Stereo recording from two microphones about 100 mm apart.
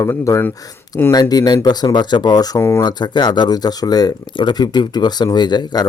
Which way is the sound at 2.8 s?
45° left (ahead or behind).